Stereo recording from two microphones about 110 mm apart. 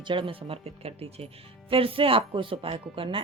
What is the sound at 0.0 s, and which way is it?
A woman's voice, 50° right (ahead or behind).